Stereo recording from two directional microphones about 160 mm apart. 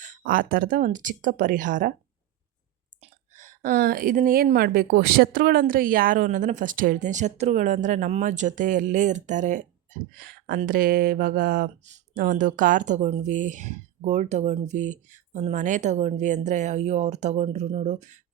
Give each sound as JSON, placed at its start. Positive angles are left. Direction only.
{"t": 0.2, "sound": "speech", "side_deg": -60}
{"t": 3.0, "sound": "a woman's voice", "side_deg": -50}